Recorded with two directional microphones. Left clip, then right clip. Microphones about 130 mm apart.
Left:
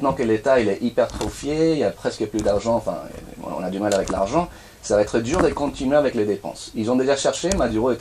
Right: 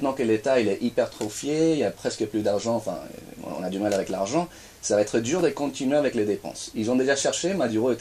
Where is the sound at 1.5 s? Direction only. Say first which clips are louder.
Left 3 dB; 5° right (ahead or behind).